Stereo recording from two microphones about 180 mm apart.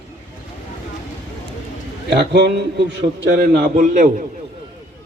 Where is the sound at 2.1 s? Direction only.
70° right (ahead or behind); by 4.2 s 45° right (ahead or behind).